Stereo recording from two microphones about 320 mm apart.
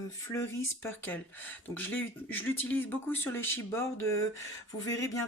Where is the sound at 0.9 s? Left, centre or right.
Centre.